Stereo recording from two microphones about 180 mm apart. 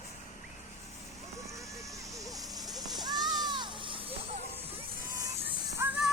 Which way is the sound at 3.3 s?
25° right (ahead or behind).